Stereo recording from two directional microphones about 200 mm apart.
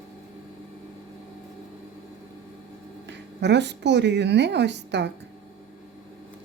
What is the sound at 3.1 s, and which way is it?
Speech, 60° right (ahead or behind).